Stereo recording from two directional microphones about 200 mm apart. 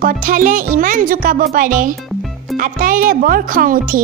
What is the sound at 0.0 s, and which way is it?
Speech, 45° right (ahead or behind).